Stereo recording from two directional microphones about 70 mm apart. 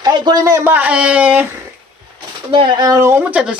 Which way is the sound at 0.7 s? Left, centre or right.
Right.